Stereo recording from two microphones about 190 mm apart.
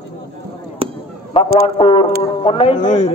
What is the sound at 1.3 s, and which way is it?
A man's voice, 25° left (ahead or behind).